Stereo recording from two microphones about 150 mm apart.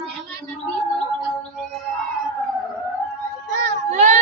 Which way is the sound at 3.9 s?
50° right (ahead or behind).